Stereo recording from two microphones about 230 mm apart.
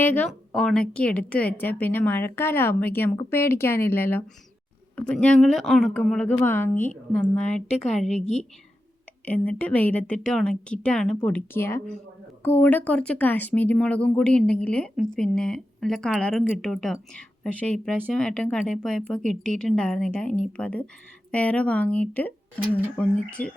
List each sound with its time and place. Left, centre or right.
0.0 s a woman's voice: centre
8.2 s a woman's voice: left
9.2 s a woman's voice: centre